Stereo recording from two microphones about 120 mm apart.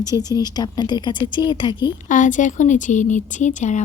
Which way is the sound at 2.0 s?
90° left.